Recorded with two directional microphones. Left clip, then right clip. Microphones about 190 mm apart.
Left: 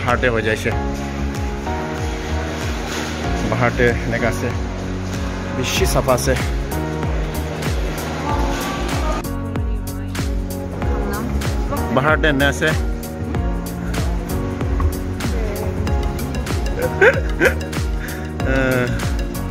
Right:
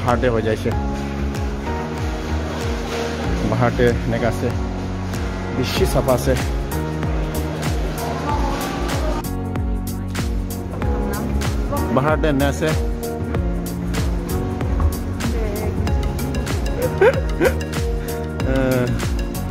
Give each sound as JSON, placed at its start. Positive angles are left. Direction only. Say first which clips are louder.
{"t": 0.0, "sound": "speech", "louder": "left 1 dB", "side_deg": -20}
{"t": 3.6, "sound": "speech", "louder": "left 1 dB", "side_deg": -15}
{"t": 5.6, "sound": "speech", "louder": "left 1 dB", "side_deg": -15}
{"t": 11.9, "sound": "speech", "louder": "left 3 dB", "side_deg": -5}
{"t": 17.0, "sound": "speech", "louder": "left 2 dB", "side_deg": -5}